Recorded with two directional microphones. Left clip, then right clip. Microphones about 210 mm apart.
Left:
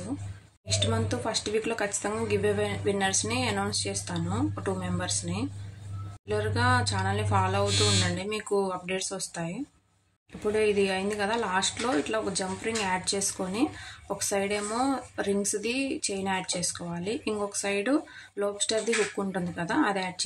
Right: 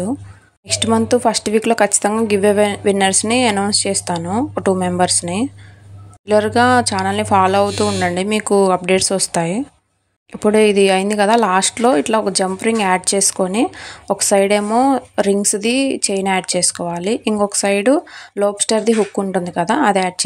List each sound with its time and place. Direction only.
0.7 s speech: 40° right (ahead or behind)